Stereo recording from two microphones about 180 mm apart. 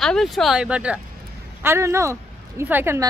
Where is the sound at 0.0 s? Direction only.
Centre (ahead or behind).